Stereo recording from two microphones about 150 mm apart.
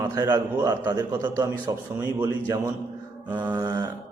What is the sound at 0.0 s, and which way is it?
A man's voice, 20° right (ahead or behind).